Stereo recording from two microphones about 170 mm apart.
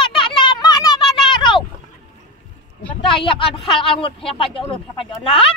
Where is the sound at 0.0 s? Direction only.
30° left (ahead or behind).